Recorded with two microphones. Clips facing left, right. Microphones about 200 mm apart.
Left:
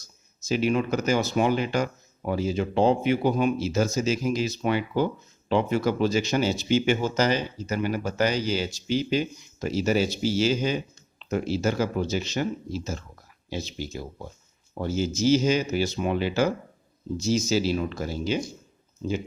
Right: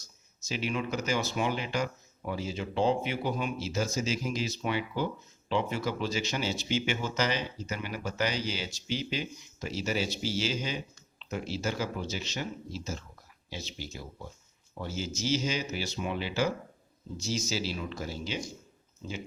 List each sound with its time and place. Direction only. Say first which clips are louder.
0.4 s speech: left 9 dB; 45° left (ahead or behind)